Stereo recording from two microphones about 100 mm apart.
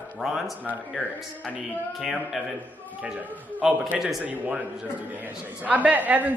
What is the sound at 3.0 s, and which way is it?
A man's voice, 10° right (ahead or behind).